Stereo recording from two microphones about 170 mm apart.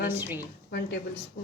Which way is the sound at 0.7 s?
70° left (ahead or behind).